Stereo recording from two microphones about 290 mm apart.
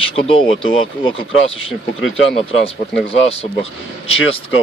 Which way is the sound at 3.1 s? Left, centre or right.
Centre.